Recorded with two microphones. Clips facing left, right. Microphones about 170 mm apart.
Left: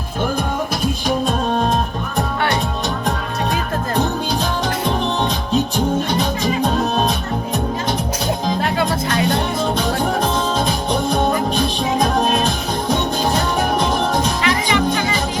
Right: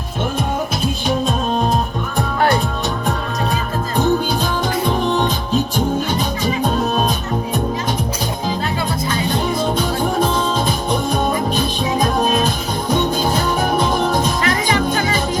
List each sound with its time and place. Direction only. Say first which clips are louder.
8.6 s music: left 2 dB; 70° left (ahead or behind)
14.4 s music: even; 45° right (ahead or behind)